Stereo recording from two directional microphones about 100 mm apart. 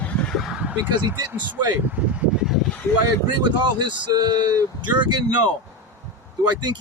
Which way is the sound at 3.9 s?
45° right (ahead or behind).